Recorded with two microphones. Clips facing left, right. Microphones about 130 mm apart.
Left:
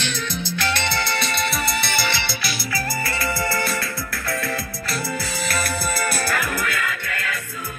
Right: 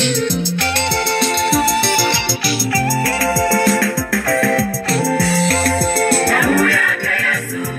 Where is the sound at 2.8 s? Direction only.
70° right (ahead or behind).